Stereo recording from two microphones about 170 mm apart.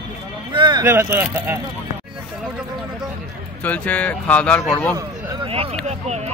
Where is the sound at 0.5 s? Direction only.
25° right (ahead or behind).